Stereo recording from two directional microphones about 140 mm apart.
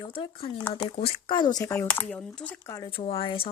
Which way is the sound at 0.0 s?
40° left (ahead or behind).